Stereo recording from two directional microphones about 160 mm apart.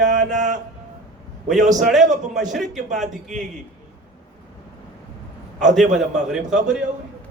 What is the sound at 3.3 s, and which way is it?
Speech, 50° right (ahead or behind).